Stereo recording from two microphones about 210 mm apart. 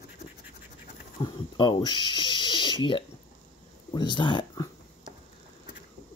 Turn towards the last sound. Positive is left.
turn(degrees=20)  # may be behind; listen again after turning